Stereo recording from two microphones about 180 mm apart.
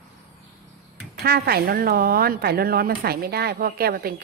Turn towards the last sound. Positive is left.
turn(degrees=-55)  # may be behind; listen again after turning